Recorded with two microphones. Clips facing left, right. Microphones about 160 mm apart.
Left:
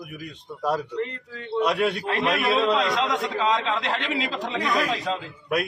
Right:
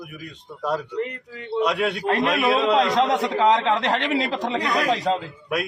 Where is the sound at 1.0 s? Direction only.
15° right (ahead or behind).